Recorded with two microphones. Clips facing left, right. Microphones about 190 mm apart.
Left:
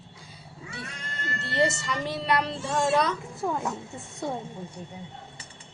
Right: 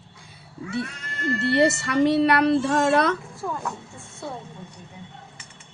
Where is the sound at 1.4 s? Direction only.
65° right (ahead or behind).